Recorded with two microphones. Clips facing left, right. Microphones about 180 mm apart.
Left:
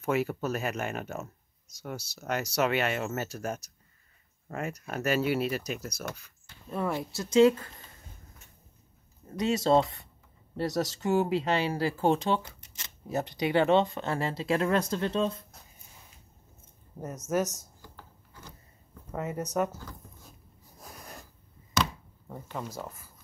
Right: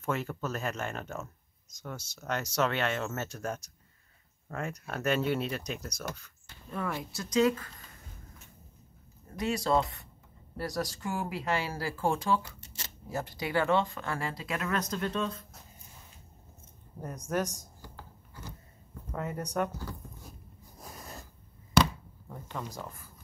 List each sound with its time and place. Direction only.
0.0 s speech: 10° left (ahead or behind)
6.7 s speech: 25° left (ahead or behind)
9.3 s speech: 25° left (ahead or behind)
17.3 s speech: 5° left (ahead or behind)
19.1 s speech: 5° left (ahead or behind)
22.3 s speech: 10° left (ahead or behind)